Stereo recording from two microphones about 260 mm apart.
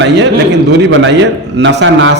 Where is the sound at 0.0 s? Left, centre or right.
Right.